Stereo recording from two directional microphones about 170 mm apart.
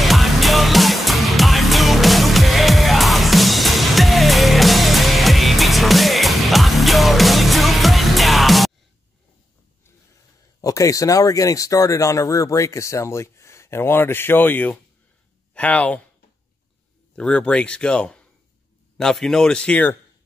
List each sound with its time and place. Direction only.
0.0 s music: centre (ahead or behind)
10.6 s speech: 20° left (ahead or behind)
17.1 s speech: 5° left (ahead or behind)